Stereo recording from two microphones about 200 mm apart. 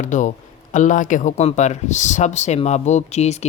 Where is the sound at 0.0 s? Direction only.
40° left (ahead or behind).